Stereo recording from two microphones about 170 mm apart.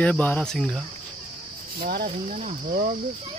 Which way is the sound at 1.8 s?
55° right (ahead or behind).